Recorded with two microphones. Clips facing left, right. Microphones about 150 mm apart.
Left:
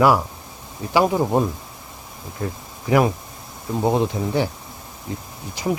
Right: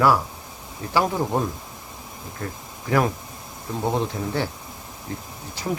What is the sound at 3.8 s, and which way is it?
Speech, 15° left (ahead or behind).